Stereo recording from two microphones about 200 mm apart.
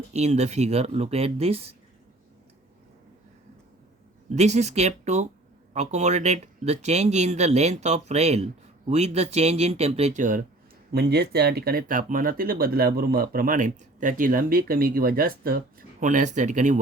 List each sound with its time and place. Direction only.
0.1 s speech: 35° right (ahead or behind)
4.3 s speech: 35° right (ahead or behind)
10.9 s speech: 55° right (ahead or behind); by 16.8 s 40° right (ahead or behind)